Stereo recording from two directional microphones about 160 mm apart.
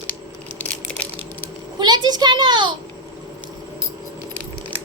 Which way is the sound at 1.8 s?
25° right (ahead or behind).